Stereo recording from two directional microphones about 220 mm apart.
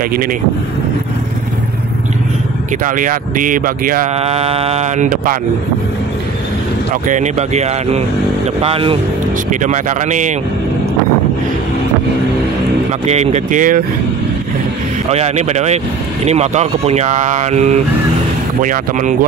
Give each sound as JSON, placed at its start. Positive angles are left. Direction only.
{"t": 0.1, "sound": "speech", "side_deg": -40}
{"t": 2.8, "sound": "speech", "side_deg": -35}
{"t": 7.1, "sound": "speech", "side_deg": -30}
{"t": 13.0, "sound": "speech", "side_deg": -30}
{"t": 15.0, "sound": "speech", "side_deg": -30}